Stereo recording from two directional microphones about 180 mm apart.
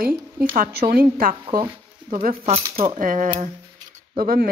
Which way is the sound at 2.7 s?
40° right (ahead or behind).